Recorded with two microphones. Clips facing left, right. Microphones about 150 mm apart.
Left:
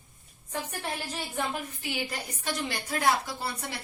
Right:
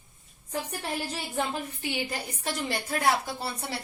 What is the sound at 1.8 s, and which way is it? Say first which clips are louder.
A woman's voice: right 3 dB; 30° right (ahead or behind).